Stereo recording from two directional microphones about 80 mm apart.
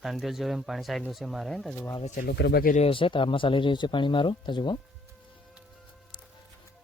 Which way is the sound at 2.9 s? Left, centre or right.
Left.